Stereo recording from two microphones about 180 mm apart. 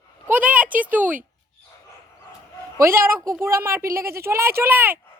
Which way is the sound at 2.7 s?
15° right (ahead or behind).